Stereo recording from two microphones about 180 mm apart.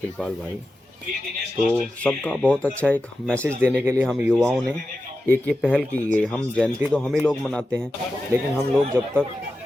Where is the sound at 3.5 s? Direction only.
10° right (ahead or behind).